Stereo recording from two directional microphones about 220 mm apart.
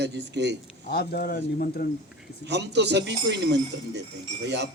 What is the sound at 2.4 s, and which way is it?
A man's voice, 50° right (ahead or behind).